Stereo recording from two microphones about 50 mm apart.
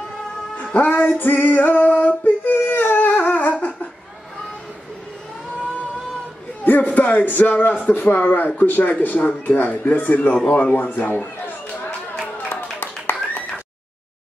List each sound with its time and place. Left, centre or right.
0.7 s speech: left
1.2 s singing: left
6.6 s speech: left
10.5 s a sound: left